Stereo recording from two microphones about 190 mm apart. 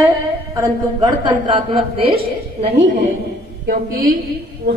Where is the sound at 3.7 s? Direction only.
50° right (ahead or behind).